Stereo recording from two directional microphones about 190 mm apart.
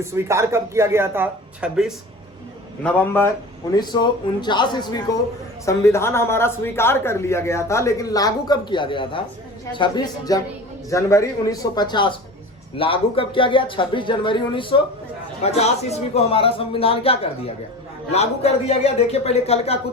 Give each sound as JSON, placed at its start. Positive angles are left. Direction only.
{"t": 0.0, "sound": "speech", "side_deg": -15}
{"t": 2.8, "sound": "a man's voice", "side_deg": 10}